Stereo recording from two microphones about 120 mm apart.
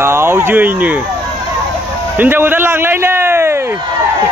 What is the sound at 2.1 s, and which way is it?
A man's voice, 15° right (ahead or behind).